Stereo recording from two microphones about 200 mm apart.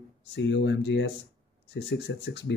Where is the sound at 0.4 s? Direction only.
60° left (ahead or behind).